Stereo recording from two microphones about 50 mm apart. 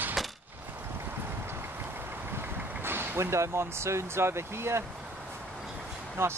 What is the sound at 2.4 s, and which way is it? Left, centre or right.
Speech, right.